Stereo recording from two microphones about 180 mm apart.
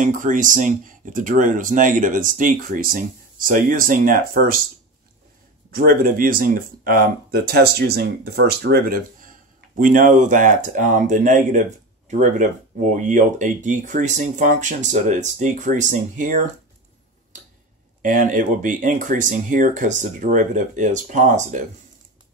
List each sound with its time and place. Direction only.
0.0 s speech: 45° right (ahead or behind)
5.7 s speech: 55° right (ahead or behind)
18.0 s speech: 45° right (ahead or behind)